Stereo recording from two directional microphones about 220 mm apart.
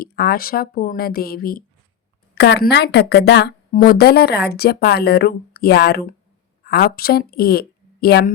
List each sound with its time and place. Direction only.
0.0 s a woman's voice: 45° left (ahead or behind)